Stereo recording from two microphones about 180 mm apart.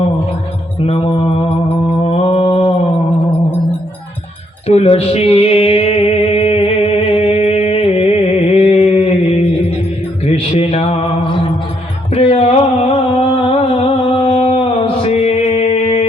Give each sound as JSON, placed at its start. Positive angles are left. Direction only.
{"t": 0.9, "sound": "mantra", "side_deg": 30}
{"t": 4.6, "sound": "mantra", "side_deg": 35}
{"t": 12.1, "sound": "music", "side_deg": 35}
{"t": 13.1, "sound": "a sound", "side_deg": 30}